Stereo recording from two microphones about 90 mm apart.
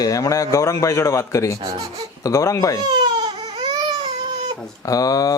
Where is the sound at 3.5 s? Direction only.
75° right (ahead or behind).